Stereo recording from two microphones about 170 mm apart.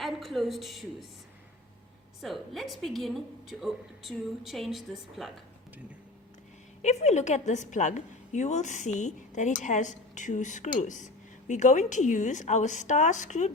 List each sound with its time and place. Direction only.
0.0 s a woman's voice: centre (ahead or behind)
2.2 s a woman's voice: centre (ahead or behind)
6.8 s a woman's voice: 40° left (ahead or behind)